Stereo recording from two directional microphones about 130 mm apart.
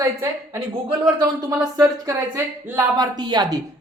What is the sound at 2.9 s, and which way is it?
Speech, 30° right (ahead or behind).